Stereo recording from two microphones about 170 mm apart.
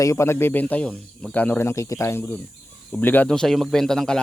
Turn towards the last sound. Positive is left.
turn(degrees=5)  # may be behind; listen again after turning